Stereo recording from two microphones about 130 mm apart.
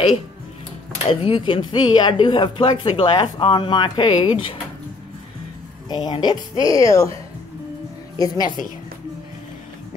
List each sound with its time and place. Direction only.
1.0 s speech: 45° left (ahead or behind)
5.9 s a woman's voice: 35° left (ahead or behind)
8.2 s speech: 30° left (ahead or behind)